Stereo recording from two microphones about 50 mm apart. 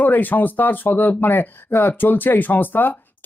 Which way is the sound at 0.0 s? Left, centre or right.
Left.